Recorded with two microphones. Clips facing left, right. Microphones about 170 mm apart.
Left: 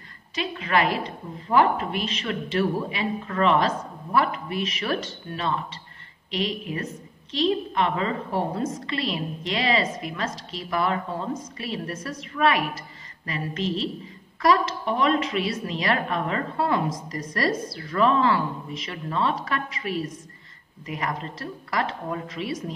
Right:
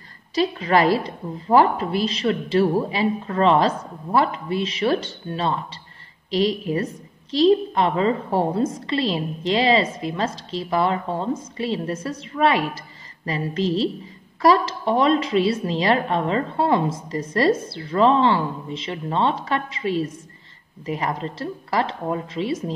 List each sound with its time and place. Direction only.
0.3 s a woman's voice: 35° right (ahead or behind)